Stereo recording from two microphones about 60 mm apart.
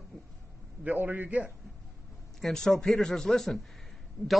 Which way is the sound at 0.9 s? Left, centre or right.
Right.